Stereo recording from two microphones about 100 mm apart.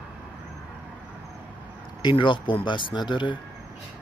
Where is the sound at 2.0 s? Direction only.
55° left (ahead or behind).